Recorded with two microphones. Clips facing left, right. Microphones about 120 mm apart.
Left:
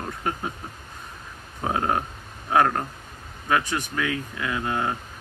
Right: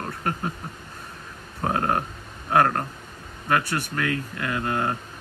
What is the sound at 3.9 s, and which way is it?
Speech, 10° left (ahead or behind).